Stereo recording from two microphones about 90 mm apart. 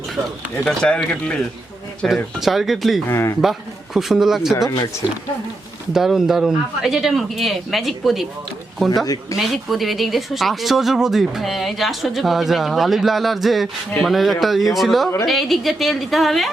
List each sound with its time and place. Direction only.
0.7 s speech: 10° left (ahead or behind)
3.1 s a man's voice: 30° left (ahead or behind)
3.9 s speech: 5° right (ahead or behind)
5.9 s speech: 5° right (ahead or behind)
9.3 s speech: centre (ahead or behind)